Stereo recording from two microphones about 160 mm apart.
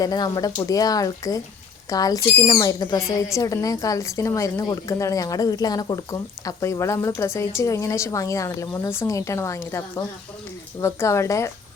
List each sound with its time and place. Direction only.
0.0 s speech: 25° left (ahead or behind)